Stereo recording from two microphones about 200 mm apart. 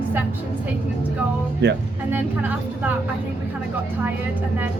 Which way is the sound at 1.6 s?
55° right (ahead or behind).